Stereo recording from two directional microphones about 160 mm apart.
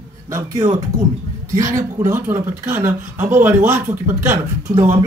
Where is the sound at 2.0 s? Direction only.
15° right (ahead or behind).